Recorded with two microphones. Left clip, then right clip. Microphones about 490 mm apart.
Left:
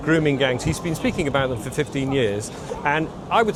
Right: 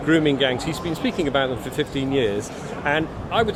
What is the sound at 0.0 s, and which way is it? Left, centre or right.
Speech, left.